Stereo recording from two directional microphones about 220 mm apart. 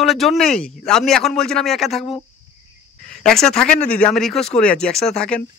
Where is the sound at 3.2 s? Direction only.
Centre (ahead or behind).